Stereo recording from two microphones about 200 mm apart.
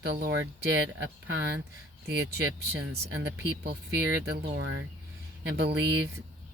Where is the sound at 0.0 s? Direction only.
55° right (ahead or behind).